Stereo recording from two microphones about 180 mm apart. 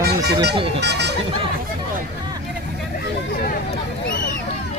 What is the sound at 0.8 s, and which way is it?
Speech, 70° right (ahead or behind).